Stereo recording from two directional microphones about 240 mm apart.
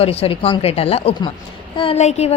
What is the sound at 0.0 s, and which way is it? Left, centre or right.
A woman's voice, left.